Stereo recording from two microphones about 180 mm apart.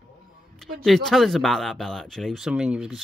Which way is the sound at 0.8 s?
Centre (ahead or behind).